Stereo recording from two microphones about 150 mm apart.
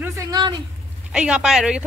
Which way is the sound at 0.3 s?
30° right (ahead or behind).